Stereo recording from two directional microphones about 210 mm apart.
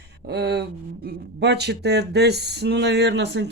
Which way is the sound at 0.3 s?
50° right (ahead or behind).